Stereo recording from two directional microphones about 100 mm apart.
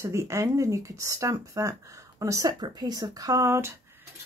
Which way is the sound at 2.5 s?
45° right (ahead or behind).